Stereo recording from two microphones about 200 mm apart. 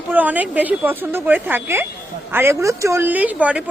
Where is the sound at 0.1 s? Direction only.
10° right (ahead or behind).